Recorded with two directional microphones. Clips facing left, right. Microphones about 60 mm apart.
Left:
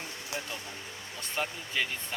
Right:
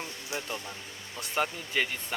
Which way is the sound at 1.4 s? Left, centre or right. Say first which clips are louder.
Right 3 dB; right.